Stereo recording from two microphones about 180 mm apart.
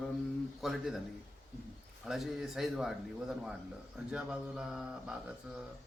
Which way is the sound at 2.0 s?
Centre (ahead or behind).